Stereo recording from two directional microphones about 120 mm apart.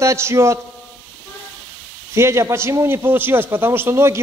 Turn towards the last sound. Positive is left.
turn(degrees=-20)  # may be behind; listen again after turning